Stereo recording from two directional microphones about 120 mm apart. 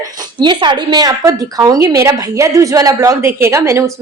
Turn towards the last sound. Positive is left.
turn(degrees=-25)  # may be behind; listen again after turning